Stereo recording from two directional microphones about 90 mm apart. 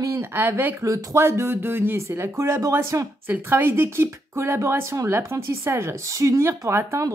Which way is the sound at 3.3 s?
25° right (ahead or behind).